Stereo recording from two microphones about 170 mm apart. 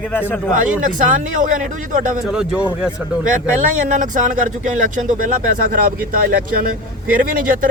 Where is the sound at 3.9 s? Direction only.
50° right (ahead or behind).